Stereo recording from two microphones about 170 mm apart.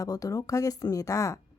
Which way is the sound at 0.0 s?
20° left (ahead or behind).